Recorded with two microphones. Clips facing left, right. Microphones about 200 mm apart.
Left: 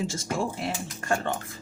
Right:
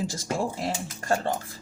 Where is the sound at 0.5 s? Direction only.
35° right (ahead or behind).